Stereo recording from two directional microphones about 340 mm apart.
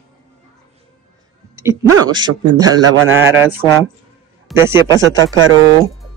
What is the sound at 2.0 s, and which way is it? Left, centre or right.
A man's voice, centre.